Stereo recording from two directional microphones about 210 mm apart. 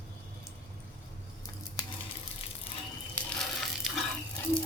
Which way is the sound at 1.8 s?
20° left (ahead or behind).